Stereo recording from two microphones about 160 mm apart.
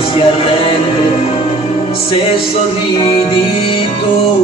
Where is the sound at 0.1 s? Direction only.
35° left (ahead or behind).